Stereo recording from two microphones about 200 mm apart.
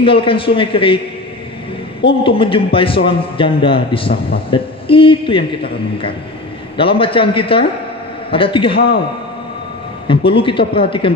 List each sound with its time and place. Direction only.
0.0 s a man's voice: 25° left (ahead or behind)
2.0 s a man's voice: 25° left (ahead or behind)
6.8 s a man's voice: 25° left (ahead or behind)
10.0 s a man's voice: 25° left (ahead or behind)